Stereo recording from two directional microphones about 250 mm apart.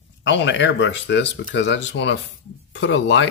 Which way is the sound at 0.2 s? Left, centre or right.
Left.